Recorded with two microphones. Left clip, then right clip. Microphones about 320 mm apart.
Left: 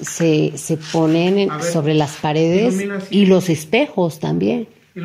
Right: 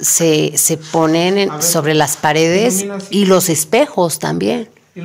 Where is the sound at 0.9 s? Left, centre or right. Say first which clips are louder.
Right 2 dB; right.